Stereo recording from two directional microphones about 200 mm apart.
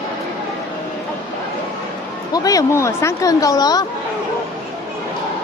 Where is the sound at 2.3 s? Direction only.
20° left (ahead or behind).